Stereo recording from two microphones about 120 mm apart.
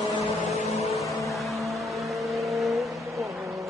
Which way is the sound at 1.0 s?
Centre (ahead or behind).